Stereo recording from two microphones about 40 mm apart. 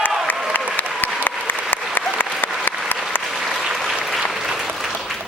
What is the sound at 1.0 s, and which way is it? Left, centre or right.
Applause, left.